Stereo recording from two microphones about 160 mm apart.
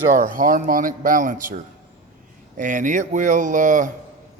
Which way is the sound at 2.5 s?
55° right (ahead or behind).